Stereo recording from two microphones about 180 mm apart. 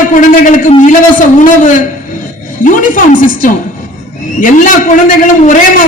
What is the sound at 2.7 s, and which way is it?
A man's voice, 45° left (ahead or behind).